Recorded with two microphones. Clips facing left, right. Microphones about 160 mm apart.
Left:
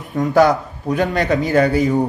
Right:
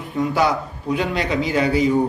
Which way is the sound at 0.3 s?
45° left (ahead or behind).